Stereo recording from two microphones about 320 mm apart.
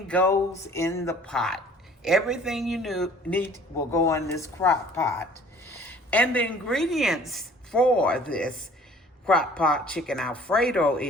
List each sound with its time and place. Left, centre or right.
0.1 s a woman's voice: centre